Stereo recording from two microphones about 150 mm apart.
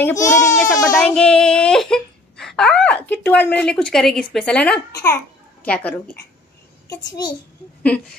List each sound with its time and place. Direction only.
0.0 s a child's voice: 20° left (ahead or behind)
1.0 s a child's voice: 5° left (ahead or behind)
6.9 s a child's voice: 30° left (ahead or behind)